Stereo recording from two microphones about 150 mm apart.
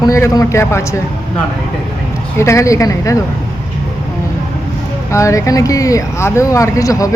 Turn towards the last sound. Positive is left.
turn(degrees=20)  # may be behind; listen again after turning